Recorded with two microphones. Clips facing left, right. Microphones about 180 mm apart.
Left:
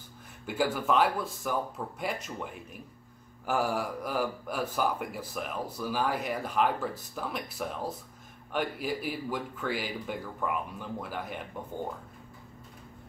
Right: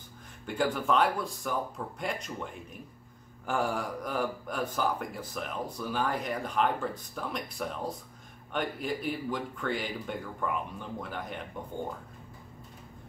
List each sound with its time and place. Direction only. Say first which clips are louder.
0.5 s speech: even; 5° left (ahead or behind)